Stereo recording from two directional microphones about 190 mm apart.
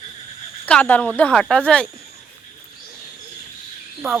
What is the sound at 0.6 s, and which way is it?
A woman's voice, 10° left (ahead or behind).